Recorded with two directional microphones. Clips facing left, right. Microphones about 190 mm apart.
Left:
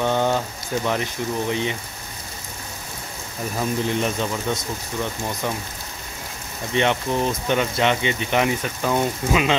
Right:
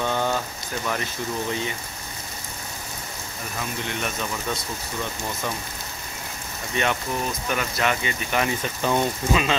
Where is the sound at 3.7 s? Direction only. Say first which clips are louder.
Left 6 dB; 30° left (ahead or behind).